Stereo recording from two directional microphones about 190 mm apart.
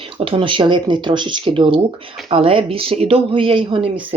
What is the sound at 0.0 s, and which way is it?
Speech, 30° right (ahead or behind).